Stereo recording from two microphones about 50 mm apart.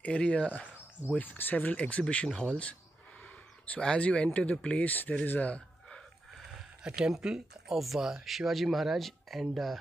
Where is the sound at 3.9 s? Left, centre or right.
Left.